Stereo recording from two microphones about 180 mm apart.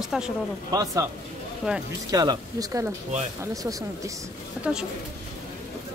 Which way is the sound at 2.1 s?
20° right (ahead or behind).